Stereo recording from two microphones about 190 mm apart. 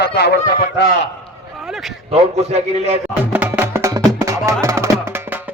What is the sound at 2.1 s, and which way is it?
Speech, 35° right (ahead or behind).